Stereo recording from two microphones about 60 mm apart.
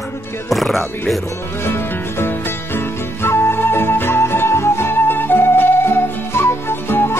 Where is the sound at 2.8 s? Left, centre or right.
Left.